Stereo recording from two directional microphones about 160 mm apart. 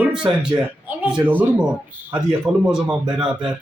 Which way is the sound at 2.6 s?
5° right (ahead or behind).